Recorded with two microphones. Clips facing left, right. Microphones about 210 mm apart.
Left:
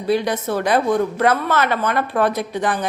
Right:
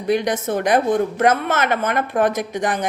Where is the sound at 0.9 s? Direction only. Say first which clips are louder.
Even; 45° right (ahead or behind).